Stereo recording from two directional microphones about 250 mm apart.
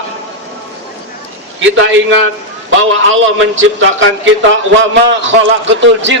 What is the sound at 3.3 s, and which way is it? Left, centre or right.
A man's voice, right.